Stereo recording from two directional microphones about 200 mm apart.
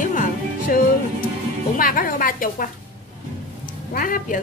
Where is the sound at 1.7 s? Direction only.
45° left (ahead or behind).